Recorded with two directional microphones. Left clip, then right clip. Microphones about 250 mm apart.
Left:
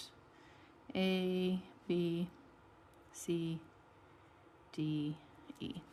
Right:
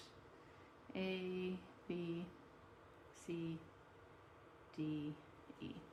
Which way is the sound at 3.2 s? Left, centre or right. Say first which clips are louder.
Left 8 dB; left.